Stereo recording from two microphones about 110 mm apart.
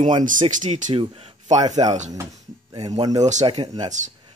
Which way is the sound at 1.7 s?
90° right.